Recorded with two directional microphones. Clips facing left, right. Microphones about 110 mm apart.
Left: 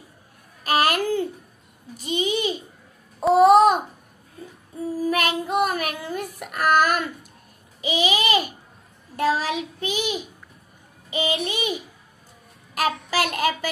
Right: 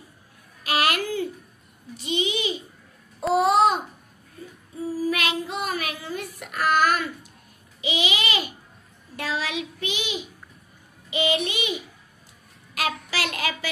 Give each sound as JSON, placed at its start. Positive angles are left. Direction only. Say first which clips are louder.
{"t": 0.7, "sound": "a sound", "louder": "left 3 dB", "side_deg": 40}
{"t": 3.3, "sound": "babbling", "louder": "left 5 dB", "side_deg": 45}
{"t": 4.9, "sound": "child singing", "louder": "left 3 dB", "side_deg": 50}
{"t": 7.8, "sound": "babbling", "louder": "left 4 dB", "side_deg": 40}
{"t": 9.1, "sound": "child singing", "louder": "left 6 dB", "side_deg": 45}
{"t": 12.7, "sound": "child singing", "louder": "left 5 dB", "side_deg": 45}